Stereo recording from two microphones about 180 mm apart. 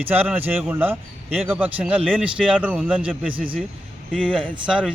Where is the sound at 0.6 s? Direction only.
10° right (ahead or behind).